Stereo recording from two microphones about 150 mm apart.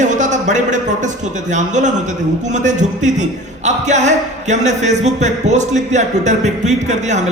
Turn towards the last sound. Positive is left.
turn(degrees=-50)  # may be behind; listen again after turning